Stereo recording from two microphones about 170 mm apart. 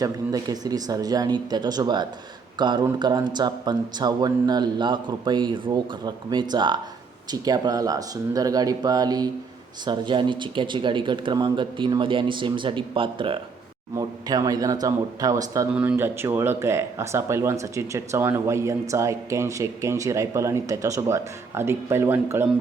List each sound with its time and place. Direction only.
0.0 s speech: 20° right (ahead or behind)
15.7 s speech: 10° right (ahead or behind)